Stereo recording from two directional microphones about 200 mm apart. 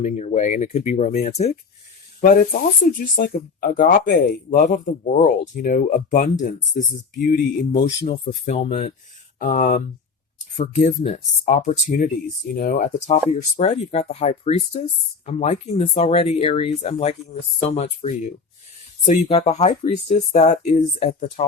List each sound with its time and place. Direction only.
0.0 s speech: 35° left (ahead or behind)
2.2 s speech: 45° left (ahead or behind)